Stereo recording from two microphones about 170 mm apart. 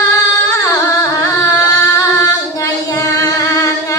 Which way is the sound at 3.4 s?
20° left (ahead or behind).